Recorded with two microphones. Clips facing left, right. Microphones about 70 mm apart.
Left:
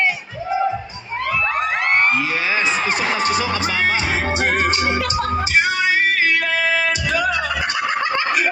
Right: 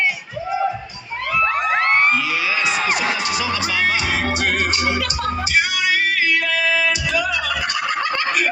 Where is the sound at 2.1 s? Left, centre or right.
Left.